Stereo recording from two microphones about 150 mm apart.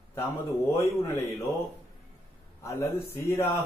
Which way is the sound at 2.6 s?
15° left (ahead or behind).